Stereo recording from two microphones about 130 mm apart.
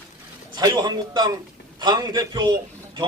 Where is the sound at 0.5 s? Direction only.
35° right (ahead or behind).